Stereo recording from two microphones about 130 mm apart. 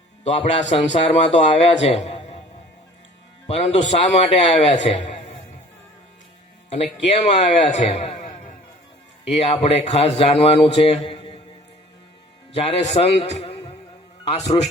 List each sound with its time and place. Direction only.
0.3 s a man's voice: 50° left (ahead or behind)
3.4 s a man's voice: 55° left (ahead or behind)
6.9 s a man's voice: 60° left (ahead or behind)
9.4 s a man's voice: 55° left (ahead or behind)
12.5 s a man's voice: 55° left (ahead or behind)